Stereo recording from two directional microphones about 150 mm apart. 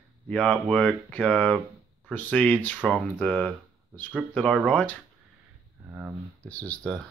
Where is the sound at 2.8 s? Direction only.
5° right (ahead or behind).